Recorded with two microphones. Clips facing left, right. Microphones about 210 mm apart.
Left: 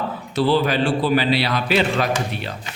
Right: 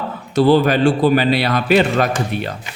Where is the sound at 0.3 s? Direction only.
45° right (ahead or behind).